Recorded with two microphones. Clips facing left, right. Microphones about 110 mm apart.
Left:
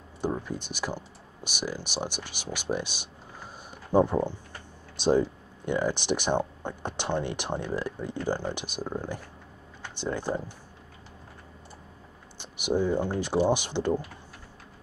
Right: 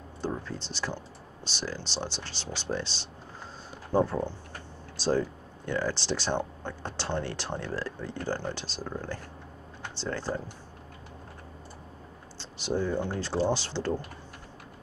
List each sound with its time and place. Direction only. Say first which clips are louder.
0.2 s speech: left 3 dB; 15° left (ahead or behind)
12.4 s speech: left 3 dB; 15° left (ahead or behind)